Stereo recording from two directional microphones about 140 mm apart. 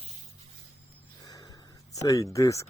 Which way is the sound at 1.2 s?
25° left (ahead or behind).